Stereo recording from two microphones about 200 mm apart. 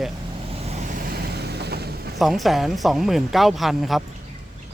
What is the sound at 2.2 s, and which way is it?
Speech, centre (ahead or behind).